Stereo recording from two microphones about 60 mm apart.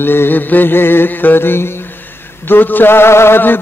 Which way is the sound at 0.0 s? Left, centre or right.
Left.